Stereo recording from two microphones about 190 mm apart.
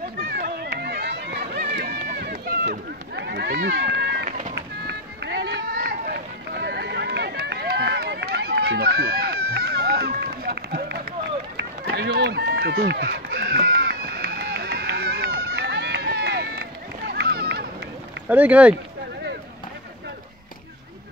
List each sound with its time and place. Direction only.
0.3 s run: 60° right (ahead or behind)
18.3 s speech: 5° right (ahead or behind)